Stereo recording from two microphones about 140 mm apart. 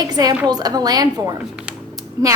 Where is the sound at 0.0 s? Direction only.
30° right (ahead or behind).